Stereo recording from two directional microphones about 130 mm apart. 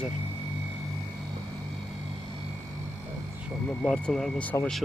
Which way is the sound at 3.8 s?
5° left (ahead or behind).